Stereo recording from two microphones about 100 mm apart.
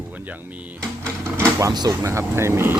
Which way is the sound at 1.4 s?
30° right (ahead or behind).